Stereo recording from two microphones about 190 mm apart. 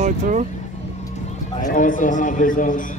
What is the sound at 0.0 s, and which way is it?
Speech, 40° right (ahead or behind).